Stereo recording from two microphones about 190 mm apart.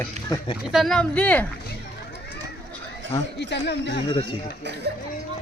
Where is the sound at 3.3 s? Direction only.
65° left (ahead or behind).